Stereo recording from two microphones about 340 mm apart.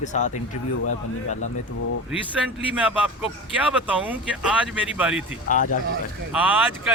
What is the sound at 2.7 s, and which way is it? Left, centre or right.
Speech, centre.